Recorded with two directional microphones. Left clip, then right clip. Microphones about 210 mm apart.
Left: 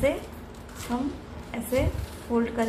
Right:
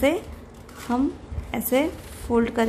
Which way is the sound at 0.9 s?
55° right (ahead or behind).